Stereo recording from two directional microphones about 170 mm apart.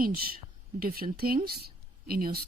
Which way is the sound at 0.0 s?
60° right (ahead or behind).